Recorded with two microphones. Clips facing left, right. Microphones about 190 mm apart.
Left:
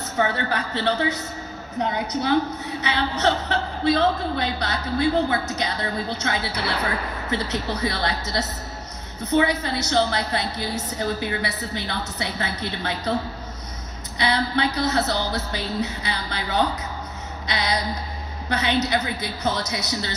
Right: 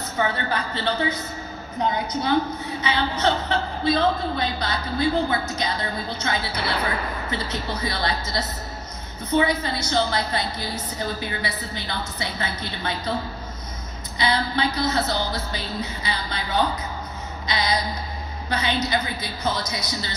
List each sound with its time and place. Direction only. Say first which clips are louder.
0.2 s a woman's voice: left 1 dB; 70° left (ahead or behind)
14.1 s a woman's voice: left 1 dB; 65° left (ahead or behind)